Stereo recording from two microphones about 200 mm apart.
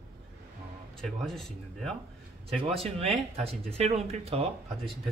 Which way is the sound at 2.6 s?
30° right (ahead or behind).